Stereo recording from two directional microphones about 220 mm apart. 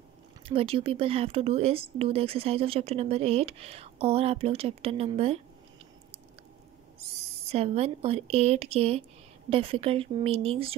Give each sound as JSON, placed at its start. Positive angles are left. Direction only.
{"t": 0.5, "sound": "speech", "side_deg": -25}
{"t": 7.0, "sound": "speech", "side_deg": -30}